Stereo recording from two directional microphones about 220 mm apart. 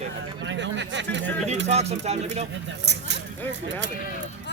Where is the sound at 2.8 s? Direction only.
50° right (ahead or behind).